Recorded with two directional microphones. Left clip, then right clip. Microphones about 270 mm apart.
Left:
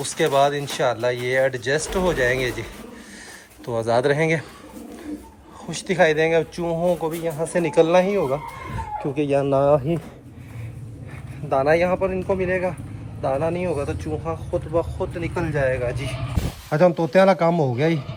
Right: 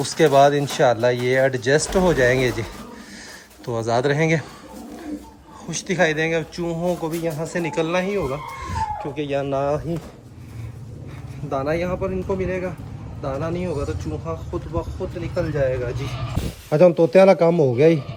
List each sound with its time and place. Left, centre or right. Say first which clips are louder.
0.0 s speech: right 4 dB; right
3.7 s speech: left 1 dB; centre
5.6 s speech: left 2 dB; centre
9.1 s speech: left 5 dB; left
11.4 s a man's voice: left 5 dB; centre